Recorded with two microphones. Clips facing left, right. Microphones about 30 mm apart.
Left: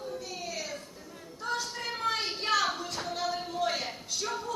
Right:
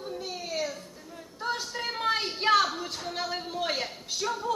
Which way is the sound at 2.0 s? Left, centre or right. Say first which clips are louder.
Right 5 dB; right.